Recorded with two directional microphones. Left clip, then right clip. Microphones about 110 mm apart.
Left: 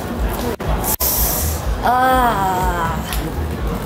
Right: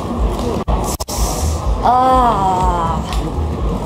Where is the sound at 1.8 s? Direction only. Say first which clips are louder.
Right 3 dB; 15° right (ahead or behind).